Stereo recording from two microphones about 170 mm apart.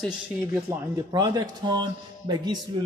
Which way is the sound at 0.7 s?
20° right (ahead or behind).